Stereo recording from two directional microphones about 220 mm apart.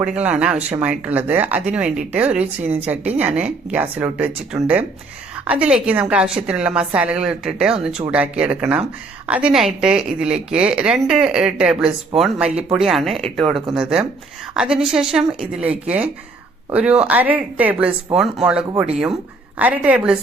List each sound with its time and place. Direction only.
0.0 s a woman's voice: 5° right (ahead or behind)